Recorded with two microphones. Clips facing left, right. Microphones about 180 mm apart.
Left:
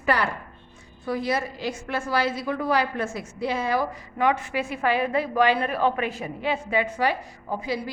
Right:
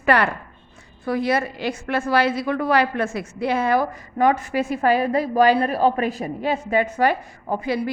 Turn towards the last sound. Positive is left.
turn(degrees=-60)  # may be behind; listen again after turning